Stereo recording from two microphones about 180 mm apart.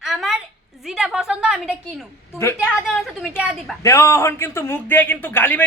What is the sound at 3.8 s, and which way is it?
Speech, 15° left (ahead or behind).